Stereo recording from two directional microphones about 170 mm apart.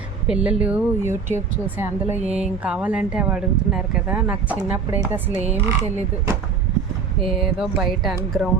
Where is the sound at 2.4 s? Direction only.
5° right (ahead or behind).